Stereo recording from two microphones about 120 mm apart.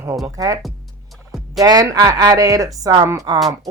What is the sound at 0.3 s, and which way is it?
Speech, 30° right (ahead or behind).